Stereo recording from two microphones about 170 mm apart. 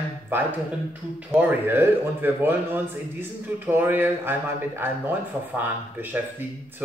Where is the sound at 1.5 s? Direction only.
10° right (ahead or behind).